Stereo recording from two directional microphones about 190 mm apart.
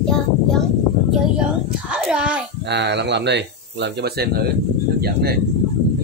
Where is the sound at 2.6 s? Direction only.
65° right (ahead or behind).